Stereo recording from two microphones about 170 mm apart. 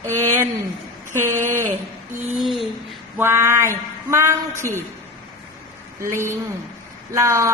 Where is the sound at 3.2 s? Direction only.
15° right (ahead or behind).